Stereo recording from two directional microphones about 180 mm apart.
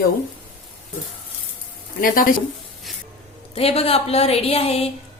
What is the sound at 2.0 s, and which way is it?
Speech, 50° left (ahead or behind).